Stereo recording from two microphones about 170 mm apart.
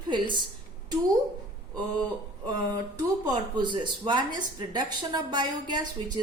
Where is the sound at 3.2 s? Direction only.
25° right (ahead or behind).